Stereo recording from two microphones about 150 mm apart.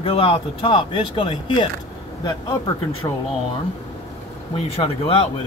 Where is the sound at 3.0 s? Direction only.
25° left (ahead or behind).